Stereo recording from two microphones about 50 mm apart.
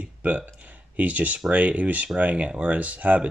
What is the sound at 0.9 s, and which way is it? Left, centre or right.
Speech, right.